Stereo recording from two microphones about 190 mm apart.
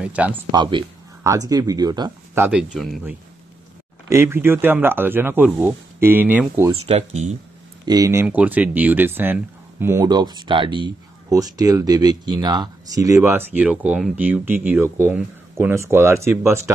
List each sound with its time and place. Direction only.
0.0 s speech: 5° right (ahead or behind)
0.5 s speech: 25° right (ahead or behind); by 3.0 s centre (ahead or behind)
4.1 s speech: 15° right (ahead or behind)
6.9 s speech: 35° right (ahead or behind)
7.8 s speech: 20° right (ahead or behind)